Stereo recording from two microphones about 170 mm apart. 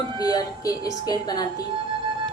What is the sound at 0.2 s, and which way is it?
A woman's voice, 20° left (ahead or behind).